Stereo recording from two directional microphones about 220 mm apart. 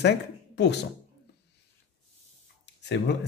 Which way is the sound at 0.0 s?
50° left (ahead or behind).